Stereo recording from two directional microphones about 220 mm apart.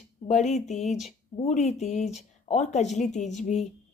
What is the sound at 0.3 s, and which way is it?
Speech, 30° left (ahead or behind).